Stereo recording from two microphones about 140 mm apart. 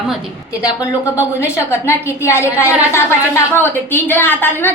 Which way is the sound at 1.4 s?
20° left (ahead or behind).